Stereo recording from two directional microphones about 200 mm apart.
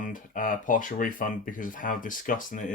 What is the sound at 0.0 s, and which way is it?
Speech, 40° left (ahead or behind).